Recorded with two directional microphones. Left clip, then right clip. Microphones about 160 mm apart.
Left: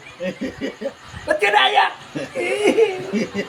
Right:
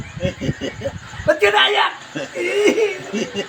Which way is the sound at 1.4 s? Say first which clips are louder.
Left 1 dB; 20° left (ahead or behind).